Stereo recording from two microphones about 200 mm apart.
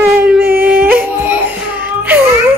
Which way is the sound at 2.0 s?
10° right (ahead or behind).